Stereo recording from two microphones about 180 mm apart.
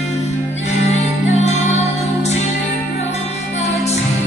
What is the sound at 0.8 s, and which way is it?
Music, 40° left (ahead or behind).